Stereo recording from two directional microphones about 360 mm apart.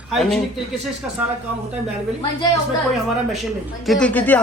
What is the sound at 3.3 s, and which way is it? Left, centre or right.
Speech, centre.